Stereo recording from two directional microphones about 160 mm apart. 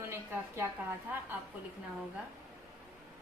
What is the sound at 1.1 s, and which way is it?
Speech, 10° right (ahead or behind).